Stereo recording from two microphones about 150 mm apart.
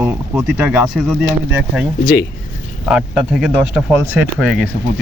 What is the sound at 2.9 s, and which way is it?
Speech, 5° right (ahead or behind).